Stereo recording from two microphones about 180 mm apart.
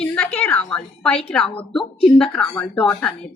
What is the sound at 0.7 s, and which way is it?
A woman's voice, 5° left (ahead or behind).